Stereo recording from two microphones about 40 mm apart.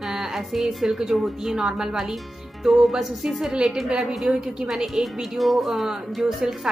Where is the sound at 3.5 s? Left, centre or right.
Centre.